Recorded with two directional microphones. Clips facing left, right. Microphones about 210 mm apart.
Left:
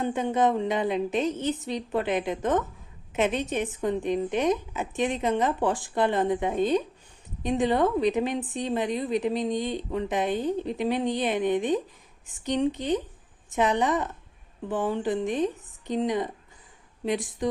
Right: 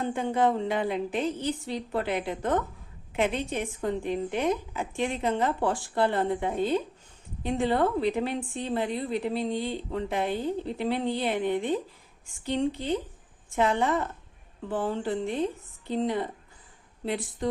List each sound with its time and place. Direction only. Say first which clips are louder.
0.0 s a woman's voice: left 1 dB; 20° left (ahead or behind)